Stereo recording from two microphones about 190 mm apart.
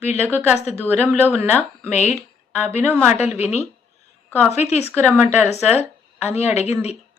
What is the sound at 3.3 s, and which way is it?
Speech, 35° left (ahead or behind).